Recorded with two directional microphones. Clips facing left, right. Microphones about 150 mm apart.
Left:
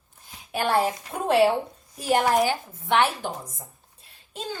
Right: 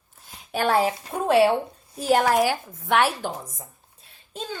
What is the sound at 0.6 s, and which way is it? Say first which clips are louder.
Speech: right 2 dB; centre (ahead or behind).